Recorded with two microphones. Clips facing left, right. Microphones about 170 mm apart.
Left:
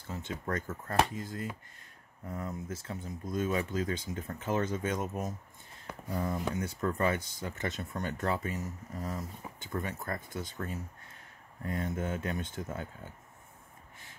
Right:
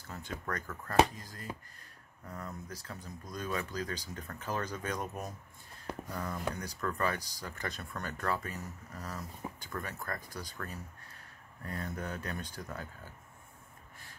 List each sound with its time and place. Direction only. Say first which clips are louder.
0.1 s speech: left 4 dB; 25° left (ahead or behind)